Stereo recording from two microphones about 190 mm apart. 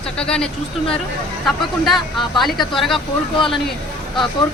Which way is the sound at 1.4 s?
Centre (ahead or behind).